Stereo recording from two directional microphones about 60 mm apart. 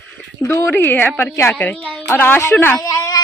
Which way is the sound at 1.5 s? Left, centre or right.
Left.